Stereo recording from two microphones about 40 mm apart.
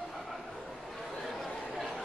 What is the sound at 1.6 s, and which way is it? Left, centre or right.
Chatter, centre.